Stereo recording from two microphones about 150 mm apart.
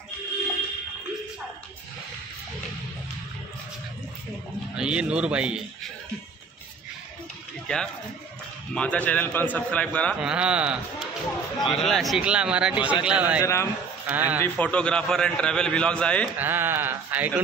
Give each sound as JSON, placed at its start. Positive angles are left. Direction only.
{"t": 4.7, "sound": "speech", "side_deg": -5}
{"t": 7.6, "sound": "a man's voice", "side_deg": 5}
{"t": 10.2, "sound": "a man's voice", "side_deg": -5}
{"t": 13.4, "sound": "speech", "side_deg": 20}
{"t": 14.0, "sound": "speech", "side_deg": -10}
{"t": 14.4, "sound": "a man's voice", "side_deg": 10}
{"t": 16.3, "sound": "speech", "side_deg": -15}